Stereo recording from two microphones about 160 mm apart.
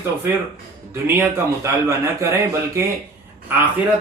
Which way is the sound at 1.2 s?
15° right (ahead or behind).